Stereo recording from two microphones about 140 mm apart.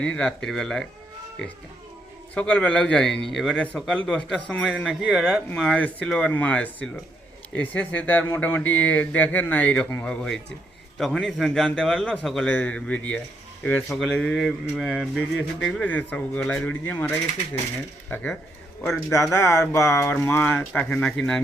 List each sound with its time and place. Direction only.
0.0 s a man's voice: 10° left (ahead or behind)
2.3 s a man's voice: 10° left (ahead or behind)
15.6 s speech: 10° left (ahead or behind)
19.1 s speech: 25° left (ahead or behind); by 21.4 s 5° left (ahead or behind)